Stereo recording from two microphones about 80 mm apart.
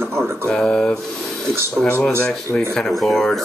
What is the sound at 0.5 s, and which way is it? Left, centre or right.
Speech, centre.